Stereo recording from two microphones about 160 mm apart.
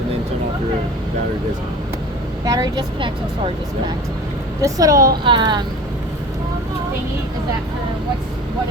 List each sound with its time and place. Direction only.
2.4 s speech: 25° right (ahead or behind)